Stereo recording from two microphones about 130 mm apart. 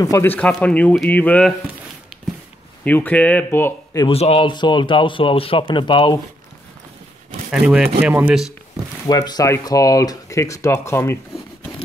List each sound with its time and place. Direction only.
0.0 s speech: 25° left (ahead or behind)
0.3 s speech: 10° left (ahead or behind)
2.8 s speech: 10° left (ahead or behind)
4.1 s speech: 50° left (ahead or behind)
4.5 s speech: 35° left (ahead or behind)
7.6 s speech: 10° right (ahead or behind)
9.0 s speech: 30° left (ahead or behind)